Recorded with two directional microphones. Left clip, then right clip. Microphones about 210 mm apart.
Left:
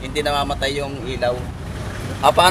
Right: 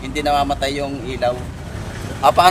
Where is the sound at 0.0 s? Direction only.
10° right (ahead or behind).